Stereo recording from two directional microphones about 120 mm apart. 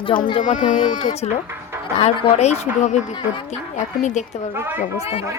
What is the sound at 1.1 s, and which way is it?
Speech, 60° left (ahead or behind).